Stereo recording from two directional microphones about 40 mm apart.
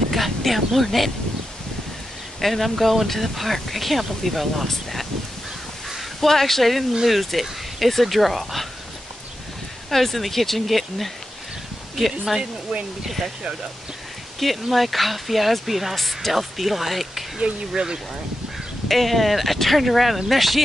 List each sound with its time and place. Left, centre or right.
0.1 s speech: centre
2.4 s speech: centre
5.9 s speech: centre
6.9 s speech: centre
7.2 s speech: centre
9.8 s speech: centre
13.0 s speech: centre
14.4 s speech: centre
17.4 s speech: right
18.9 s speech: centre